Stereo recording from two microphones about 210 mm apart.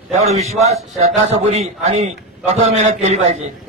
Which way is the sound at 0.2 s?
30° right (ahead or behind).